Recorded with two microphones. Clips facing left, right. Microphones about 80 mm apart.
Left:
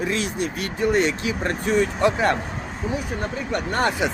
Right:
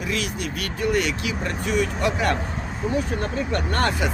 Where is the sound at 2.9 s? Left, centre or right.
Centre.